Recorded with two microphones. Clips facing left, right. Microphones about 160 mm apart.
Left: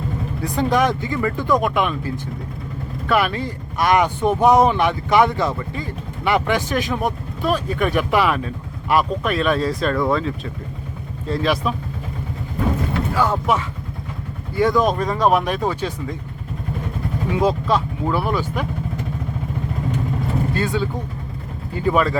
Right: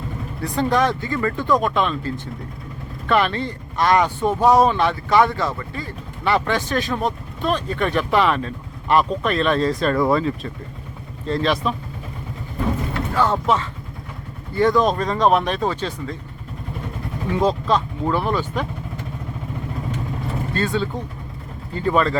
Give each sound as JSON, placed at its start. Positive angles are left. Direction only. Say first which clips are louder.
{"t": 0.5, "sound": "speech", "louder": "left 1 dB", "side_deg": 15}
{"t": 9.9, "sound": "speech", "louder": "right 1 dB", "side_deg": -10}
{"t": 13.1, "sound": "speech", "louder": "right 1 dB", "side_deg": 5}
{"t": 17.3, "sound": "speech", "louder": "even", "side_deg": 10}
{"t": 20.5, "sound": "speech", "louder": "left 1 dB", "side_deg": 10}